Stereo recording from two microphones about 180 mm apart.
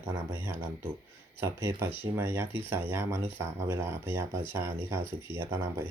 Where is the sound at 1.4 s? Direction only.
15° right (ahead or behind).